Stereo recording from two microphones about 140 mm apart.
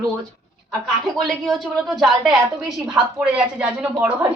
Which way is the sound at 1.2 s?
Centre (ahead or behind).